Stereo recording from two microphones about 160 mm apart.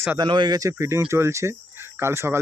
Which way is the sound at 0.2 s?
30° right (ahead or behind).